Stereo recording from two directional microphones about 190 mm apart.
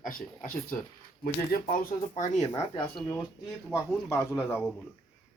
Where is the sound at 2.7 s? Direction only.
20° left (ahead or behind).